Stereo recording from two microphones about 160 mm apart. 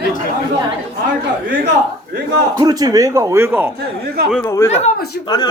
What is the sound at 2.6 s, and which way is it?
Speech, 25° right (ahead or behind).